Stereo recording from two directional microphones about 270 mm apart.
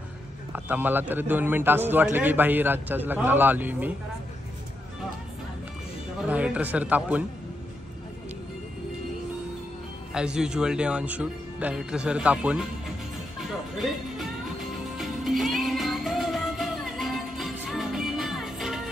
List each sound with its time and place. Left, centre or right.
0.5 s a man's voice: centre
6.2 s speech: centre
10.1 s speech: centre
13.5 s music: centre